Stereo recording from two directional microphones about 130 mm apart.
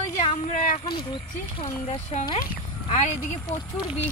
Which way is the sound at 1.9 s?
55° left (ahead or behind).